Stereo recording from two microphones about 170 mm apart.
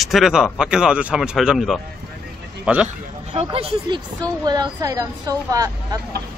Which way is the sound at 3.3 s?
35° right (ahead or behind).